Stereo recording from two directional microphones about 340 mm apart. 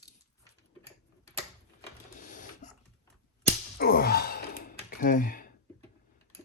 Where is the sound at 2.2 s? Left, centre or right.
Left.